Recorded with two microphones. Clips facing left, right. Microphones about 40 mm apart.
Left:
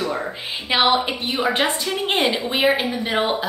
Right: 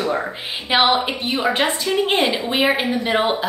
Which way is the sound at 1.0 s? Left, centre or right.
Centre.